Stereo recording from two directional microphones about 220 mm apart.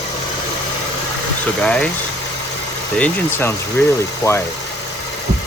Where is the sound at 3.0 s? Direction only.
5° left (ahead or behind).